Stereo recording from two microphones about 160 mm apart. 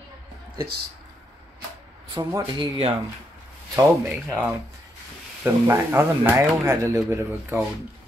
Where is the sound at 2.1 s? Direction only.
25° right (ahead or behind).